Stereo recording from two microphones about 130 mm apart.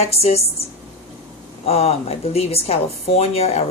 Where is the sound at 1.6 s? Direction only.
50° left (ahead or behind).